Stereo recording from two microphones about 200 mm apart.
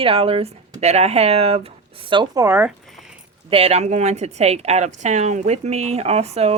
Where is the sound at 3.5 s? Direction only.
30° right (ahead or behind).